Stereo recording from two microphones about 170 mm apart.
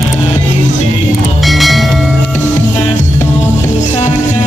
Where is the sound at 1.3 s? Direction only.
Centre (ahead or behind).